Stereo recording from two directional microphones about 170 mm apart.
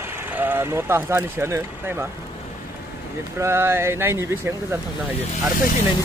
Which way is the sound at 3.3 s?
15° right (ahead or behind).